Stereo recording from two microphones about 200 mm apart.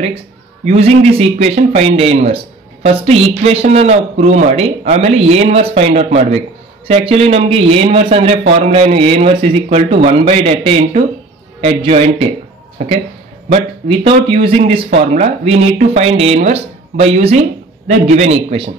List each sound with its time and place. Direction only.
0.7 s a man's voice: 30° right (ahead or behind)